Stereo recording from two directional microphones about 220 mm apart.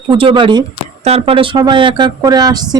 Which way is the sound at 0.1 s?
25° right (ahead or behind).